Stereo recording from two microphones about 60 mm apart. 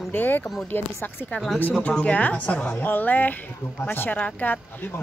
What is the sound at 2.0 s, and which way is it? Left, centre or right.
A woman's voice, left.